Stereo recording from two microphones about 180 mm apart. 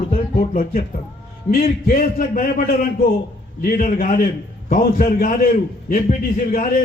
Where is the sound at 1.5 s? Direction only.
50° left (ahead or behind).